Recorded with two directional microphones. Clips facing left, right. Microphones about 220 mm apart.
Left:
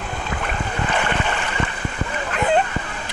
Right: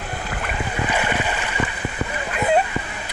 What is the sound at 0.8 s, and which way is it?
Boat, 10° right (ahead or behind).